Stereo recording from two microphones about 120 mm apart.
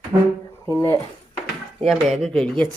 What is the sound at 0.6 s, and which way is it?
Speech, 25° left (ahead or behind).